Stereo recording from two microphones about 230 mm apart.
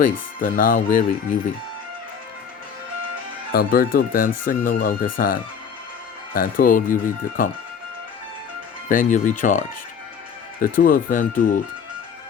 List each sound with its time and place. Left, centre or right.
0.0 s speech: left
3.5 s speech: left
8.9 s speech: left